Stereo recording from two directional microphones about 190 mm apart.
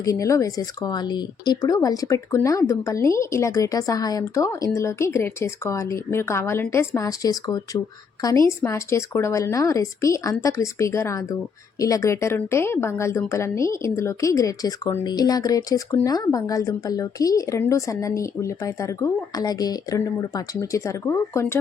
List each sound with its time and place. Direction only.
0.0 s a woman's voice: 15° left (ahead or behind)